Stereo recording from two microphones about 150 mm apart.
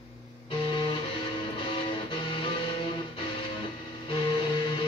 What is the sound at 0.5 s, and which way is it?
Music, 35° left (ahead or behind).